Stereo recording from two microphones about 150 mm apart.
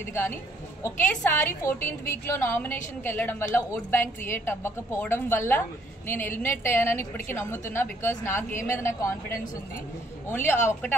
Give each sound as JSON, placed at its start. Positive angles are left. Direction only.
{"t": 0.1, "sound": "a woman's voice", "side_deg": 15}
{"t": 10.2, "sound": "a woman's voice", "side_deg": 15}